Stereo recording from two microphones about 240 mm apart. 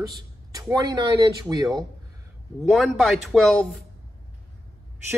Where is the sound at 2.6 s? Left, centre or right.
Centre.